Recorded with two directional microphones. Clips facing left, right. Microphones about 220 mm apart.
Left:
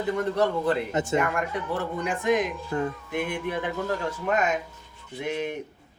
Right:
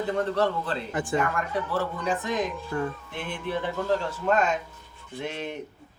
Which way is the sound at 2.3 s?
15° left (ahead or behind).